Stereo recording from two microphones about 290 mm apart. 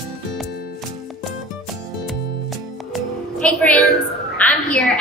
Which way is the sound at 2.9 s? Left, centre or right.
Centre.